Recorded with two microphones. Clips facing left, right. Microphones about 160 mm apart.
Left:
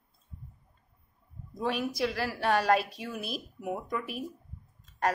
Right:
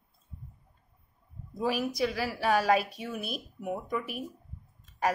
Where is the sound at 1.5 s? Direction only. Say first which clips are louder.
Right 1 dB; 5° right (ahead or behind).